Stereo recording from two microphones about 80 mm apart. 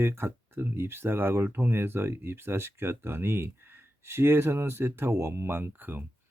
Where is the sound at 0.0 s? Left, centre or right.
Right.